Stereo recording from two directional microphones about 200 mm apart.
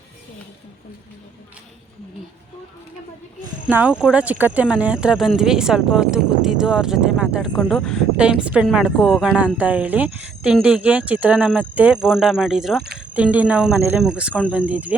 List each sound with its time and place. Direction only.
3.7 s speech: 5° right (ahead or behind)